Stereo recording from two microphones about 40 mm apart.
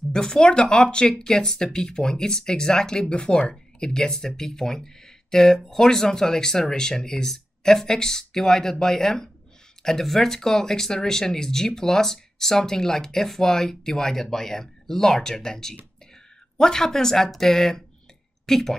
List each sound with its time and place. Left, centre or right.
0.1 s speech: centre